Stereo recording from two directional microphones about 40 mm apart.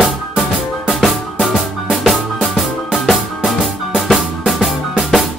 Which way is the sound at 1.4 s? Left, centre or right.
Centre.